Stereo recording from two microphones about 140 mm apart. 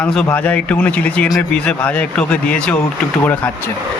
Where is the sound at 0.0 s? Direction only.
5° left (ahead or behind).